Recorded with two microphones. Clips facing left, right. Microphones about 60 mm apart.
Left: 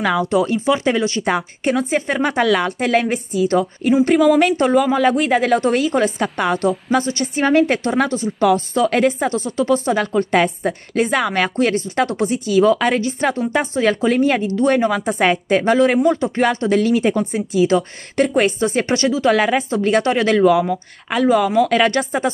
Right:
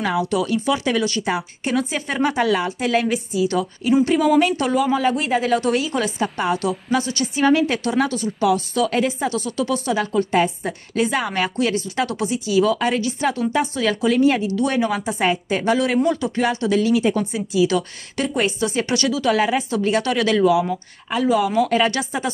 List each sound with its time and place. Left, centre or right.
0.2 s speech: left
1.2 s speech: left
2.1 s speech: left
6.2 s a woman's voice: left
6.6 s speech: left
9.4 s speech: left
9.9 s speech: left
13.0 s speech: left
19.3 s speech: left
21.6 s a woman's voice: left
21.9 s speech: left